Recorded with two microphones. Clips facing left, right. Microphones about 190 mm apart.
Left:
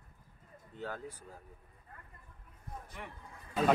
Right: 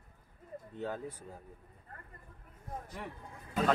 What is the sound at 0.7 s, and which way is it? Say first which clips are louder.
Speech: right 3 dB; 20° right (ahead or behind).